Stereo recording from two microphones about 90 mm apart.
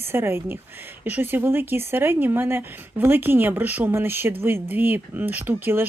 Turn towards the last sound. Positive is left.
turn(degrees=-20)  # may be behind; listen again after turning